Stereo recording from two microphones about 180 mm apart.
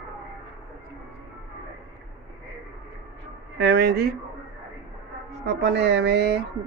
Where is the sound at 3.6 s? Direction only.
65° right (ahead or behind).